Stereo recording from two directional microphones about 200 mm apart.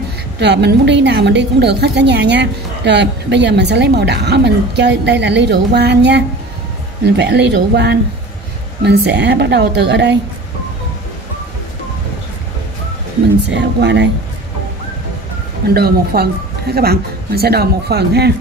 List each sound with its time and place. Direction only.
0.4 s a woman's voice: 60° right (ahead or behind)
13.5 s a woman's voice: 60° right (ahead or behind)
15.7 s a man's voice: 50° right (ahead or behind)